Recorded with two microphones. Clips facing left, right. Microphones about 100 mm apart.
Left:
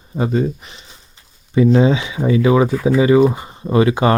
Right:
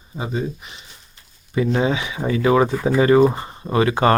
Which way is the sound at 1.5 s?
25° left (ahead or behind).